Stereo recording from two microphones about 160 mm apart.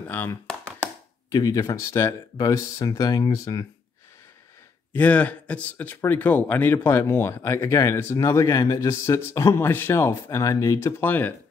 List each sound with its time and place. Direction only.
0.1 s speech: 10° left (ahead or behind)
1.3 s speech: 25° left (ahead or behind)
4.9 s speech: 10° left (ahead or behind)